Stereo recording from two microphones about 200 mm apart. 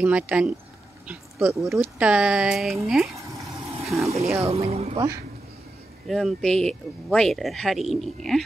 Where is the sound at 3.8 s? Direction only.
Centre (ahead or behind).